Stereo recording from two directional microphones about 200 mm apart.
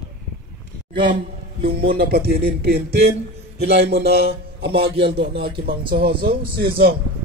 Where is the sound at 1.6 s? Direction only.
50° right (ahead or behind).